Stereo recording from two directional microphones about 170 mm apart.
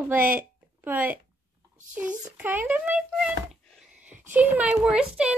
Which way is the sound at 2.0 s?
10° right (ahead or behind).